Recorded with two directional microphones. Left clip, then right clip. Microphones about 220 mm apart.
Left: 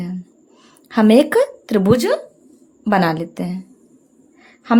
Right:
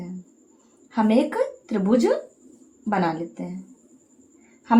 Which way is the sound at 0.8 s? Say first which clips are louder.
Left 8 dB; 45° left (ahead or behind).